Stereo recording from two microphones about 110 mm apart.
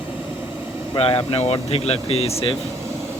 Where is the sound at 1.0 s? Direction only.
60° left (ahead or behind).